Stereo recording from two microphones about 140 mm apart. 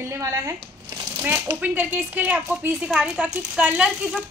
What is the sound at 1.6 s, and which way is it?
A woman's voice, 10° right (ahead or behind).